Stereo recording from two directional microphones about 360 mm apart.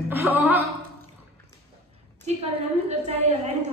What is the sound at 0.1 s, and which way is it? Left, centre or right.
Speech, centre.